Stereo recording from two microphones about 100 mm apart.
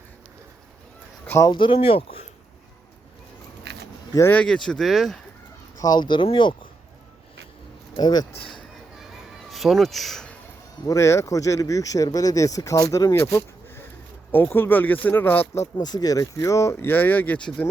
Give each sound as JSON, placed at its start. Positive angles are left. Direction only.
{"t": 1.5, "sound": "speech", "side_deg": 55}
{"t": 4.3, "sound": "speech", "side_deg": 10}
{"t": 5.8, "sound": "speech", "side_deg": 45}
{"t": 7.9, "sound": "speech", "side_deg": 45}
{"t": 9.5, "sound": "speech", "side_deg": 0}
{"t": 10.8, "sound": "speech", "side_deg": 30}
{"t": 13.1, "sound": "a sound", "side_deg": 25}
{"t": 14.3, "sound": "speech", "side_deg": 20}
{"t": 15.6, "sound": "speech", "side_deg": 40}